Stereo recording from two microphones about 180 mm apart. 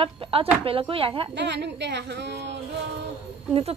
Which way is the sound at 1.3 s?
75° right (ahead or behind).